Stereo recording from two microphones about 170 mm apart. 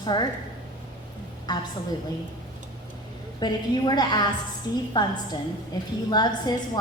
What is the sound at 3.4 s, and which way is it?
A woman's voice, 25° left (ahead or behind).